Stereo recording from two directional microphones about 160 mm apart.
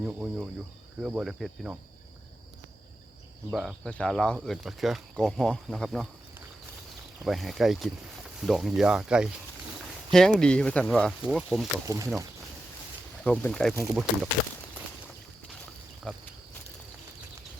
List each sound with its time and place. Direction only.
0.0 s speech: 5° right (ahead or behind)
3.5 s speech: centre (ahead or behind)
7.3 s speech: centre (ahead or behind)
11.9 s speech: 20° right (ahead or behind)
13.2 s speech: 5° left (ahead or behind)
16.1 s speech: 5° left (ahead or behind)